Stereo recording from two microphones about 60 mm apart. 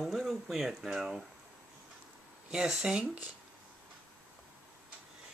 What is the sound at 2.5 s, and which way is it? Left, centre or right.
Speech, centre.